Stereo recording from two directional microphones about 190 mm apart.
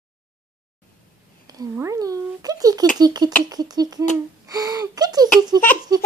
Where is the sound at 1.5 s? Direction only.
20° right (ahead or behind).